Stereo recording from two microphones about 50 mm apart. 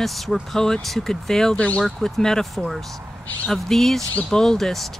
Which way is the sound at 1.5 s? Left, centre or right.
Left.